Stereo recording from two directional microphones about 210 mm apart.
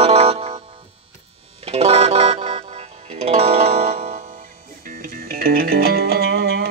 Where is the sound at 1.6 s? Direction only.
25° right (ahead or behind).